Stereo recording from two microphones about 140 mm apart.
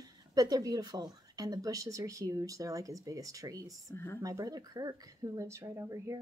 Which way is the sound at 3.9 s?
15° left (ahead or behind).